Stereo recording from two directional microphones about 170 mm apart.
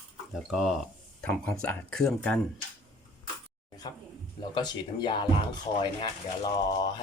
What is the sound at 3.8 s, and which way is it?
Speech, 25° left (ahead or behind).